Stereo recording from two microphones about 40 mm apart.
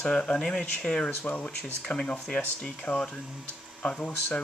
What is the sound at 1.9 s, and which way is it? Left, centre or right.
Speech, left.